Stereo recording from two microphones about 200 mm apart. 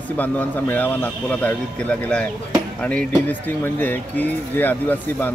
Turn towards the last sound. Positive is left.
turn(degrees=10)  # may be behind; listen again after turning